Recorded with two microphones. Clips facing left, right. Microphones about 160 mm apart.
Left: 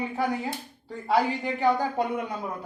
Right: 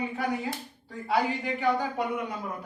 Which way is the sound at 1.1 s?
35° left (ahead or behind).